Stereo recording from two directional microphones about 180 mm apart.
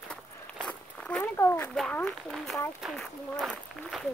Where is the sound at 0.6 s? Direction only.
5° left (ahead or behind).